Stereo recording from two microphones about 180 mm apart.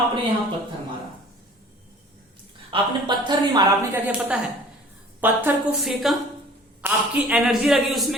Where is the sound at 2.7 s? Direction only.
25° right (ahead or behind).